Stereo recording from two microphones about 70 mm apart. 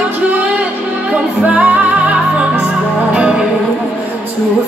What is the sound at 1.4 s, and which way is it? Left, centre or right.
Music, right.